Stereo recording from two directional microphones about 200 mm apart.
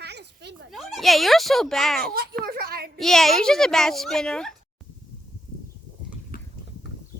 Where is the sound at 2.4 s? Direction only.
50° right (ahead or behind).